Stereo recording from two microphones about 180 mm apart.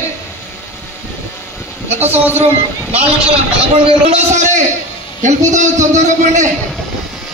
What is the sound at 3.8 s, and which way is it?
A man's voice, 35° right (ahead or behind).